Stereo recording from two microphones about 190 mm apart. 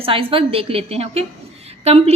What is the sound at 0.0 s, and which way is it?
A woman's voice, 30° right (ahead or behind).